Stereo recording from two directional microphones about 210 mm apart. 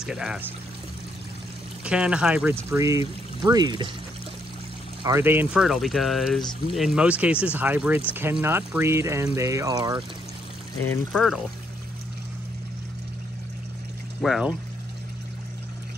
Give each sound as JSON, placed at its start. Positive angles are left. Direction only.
{"t": 0.0, "sound": "speech", "side_deg": -5}
{"t": 1.9, "sound": "speech", "side_deg": -5}
{"t": 5.0, "sound": "speech", "side_deg": -10}
{"t": 10.8, "sound": "speech", "side_deg": 5}
{"t": 14.2, "sound": "speech", "side_deg": 0}